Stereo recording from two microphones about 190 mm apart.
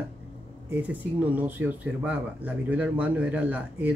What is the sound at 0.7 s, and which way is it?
Speech, 10° right (ahead or behind).